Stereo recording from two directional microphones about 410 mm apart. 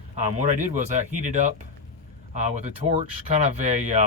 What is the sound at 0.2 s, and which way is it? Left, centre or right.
Speech, centre.